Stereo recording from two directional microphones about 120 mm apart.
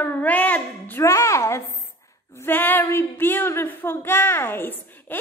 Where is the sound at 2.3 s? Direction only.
15° left (ahead or behind).